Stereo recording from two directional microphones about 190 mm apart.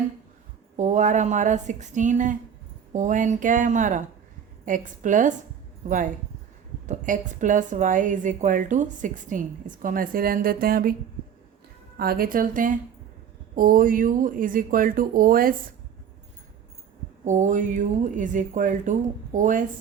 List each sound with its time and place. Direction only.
0.8 s a woman's voice: 40° right (ahead or behind)
6.8 s a woman's voice: 40° right (ahead or behind)
11.9 s a woman's voice: 50° right (ahead or behind)
17.2 s speech: 40° right (ahead or behind)